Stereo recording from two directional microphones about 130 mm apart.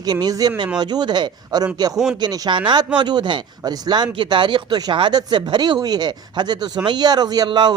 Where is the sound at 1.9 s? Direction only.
5° right (ahead or behind).